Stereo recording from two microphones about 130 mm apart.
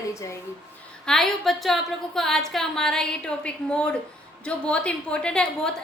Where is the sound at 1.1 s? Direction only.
Centre (ahead or behind).